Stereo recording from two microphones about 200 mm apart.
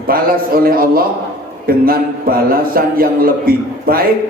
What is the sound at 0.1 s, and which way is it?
A man's voice, 45° right (ahead or behind).